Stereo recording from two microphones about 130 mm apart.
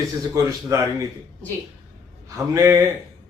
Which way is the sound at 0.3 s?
25° right (ahead or behind).